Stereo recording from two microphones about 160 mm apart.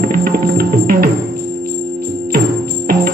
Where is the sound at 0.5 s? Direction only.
70° right (ahead or behind).